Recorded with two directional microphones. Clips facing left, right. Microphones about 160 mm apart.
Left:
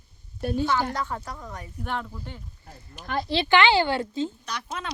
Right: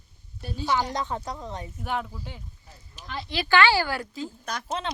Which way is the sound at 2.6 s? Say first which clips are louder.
Left 5 dB; 55° left (ahead or behind).